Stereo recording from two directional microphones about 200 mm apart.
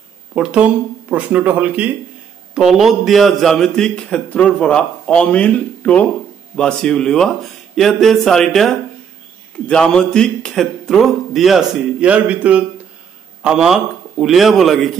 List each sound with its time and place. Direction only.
0.3 s a man's voice: 5° right (ahead or behind)